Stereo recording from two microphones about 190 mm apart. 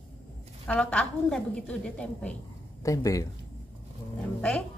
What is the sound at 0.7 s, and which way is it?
A woman's voice, 5° left (ahead or behind).